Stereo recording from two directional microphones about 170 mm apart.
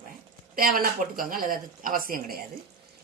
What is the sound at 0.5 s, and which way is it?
Speech, 55° right (ahead or behind).